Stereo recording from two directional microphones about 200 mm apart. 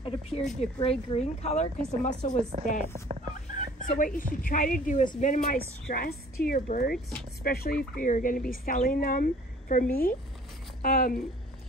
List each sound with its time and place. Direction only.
0.0 s speech: 25° left (ahead or behind)
0.4 s speech: centre (ahead or behind)
0.7 s speech: 30° left (ahead or behind)
2.5 s a woman's voice: 30° right (ahead or behind)
3.5 s speech: 40° left (ahead or behind)
5.9 s speech: 50° left (ahead or behind)